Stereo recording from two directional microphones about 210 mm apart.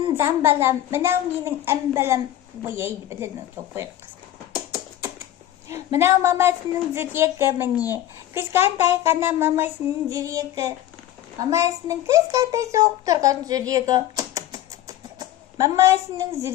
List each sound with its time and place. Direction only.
0.2 s a woman's voice: 10° right (ahead or behind)
5.9 s a woman's voice: 15° right (ahead or behind)